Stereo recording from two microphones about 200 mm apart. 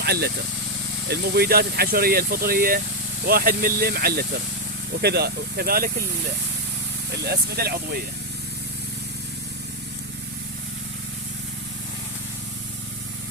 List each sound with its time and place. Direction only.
0.0 s speech: 55° right (ahead or behind)
7.3 s speech: 50° right (ahead or behind)